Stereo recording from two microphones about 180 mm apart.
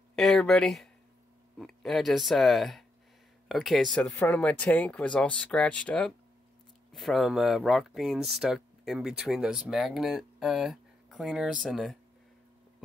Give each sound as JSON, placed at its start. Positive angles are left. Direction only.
{"t": 0.1, "sound": "speech", "side_deg": 0}